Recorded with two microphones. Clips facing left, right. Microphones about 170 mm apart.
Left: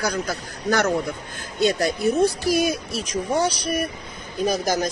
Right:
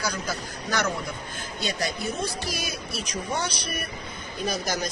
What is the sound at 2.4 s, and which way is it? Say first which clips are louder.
Speech: left 12 dB; 45° left (ahead or behind).